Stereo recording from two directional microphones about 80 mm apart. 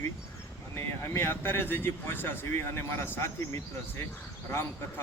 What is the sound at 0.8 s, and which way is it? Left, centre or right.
A man's voice, left.